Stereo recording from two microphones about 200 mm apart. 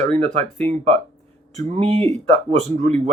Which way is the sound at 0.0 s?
35° right (ahead or behind).